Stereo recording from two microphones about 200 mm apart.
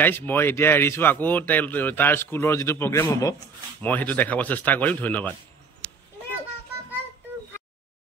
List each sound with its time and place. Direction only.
0.0 s speech: 10° left (ahead or behind)